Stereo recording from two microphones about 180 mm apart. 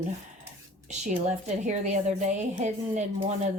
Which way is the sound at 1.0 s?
40° right (ahead or behind).